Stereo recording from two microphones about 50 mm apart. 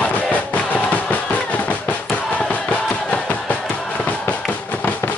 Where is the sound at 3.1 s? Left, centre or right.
Left.